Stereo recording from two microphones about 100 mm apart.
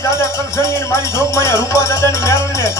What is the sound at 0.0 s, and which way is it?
Music, 30° left (ahead or behind).